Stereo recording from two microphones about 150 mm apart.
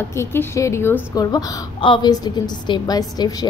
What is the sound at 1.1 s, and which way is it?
A woman's voice, 30° left (ahead or behind).